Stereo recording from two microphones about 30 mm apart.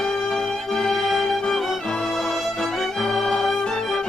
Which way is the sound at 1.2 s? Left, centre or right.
Left.